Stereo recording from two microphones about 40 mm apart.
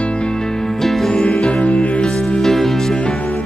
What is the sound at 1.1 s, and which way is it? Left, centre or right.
Music, left.